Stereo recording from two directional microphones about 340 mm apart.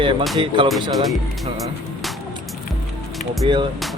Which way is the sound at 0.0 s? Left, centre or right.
Centre.